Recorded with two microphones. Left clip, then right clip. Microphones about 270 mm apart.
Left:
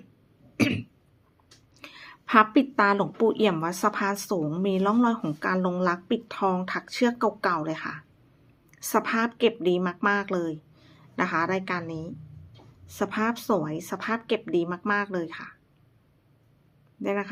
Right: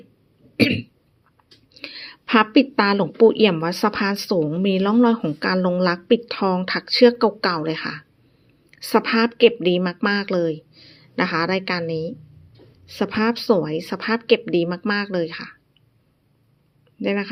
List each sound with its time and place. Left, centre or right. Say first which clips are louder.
0.6 s cough: right 7 dB; centre
1.8 s a woman's voice: right 9 dB; centre
17.0 s speech: right 5 dB; centre